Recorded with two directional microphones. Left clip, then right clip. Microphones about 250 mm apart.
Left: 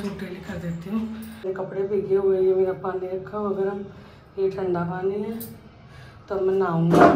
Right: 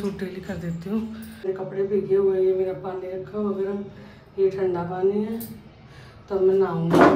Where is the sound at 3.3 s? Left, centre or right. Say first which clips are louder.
Left 1 dB; centre.